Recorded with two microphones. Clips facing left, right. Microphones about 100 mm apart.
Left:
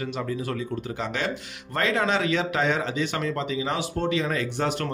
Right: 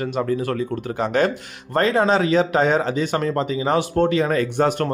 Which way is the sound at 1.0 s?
45° right (ahead or behind).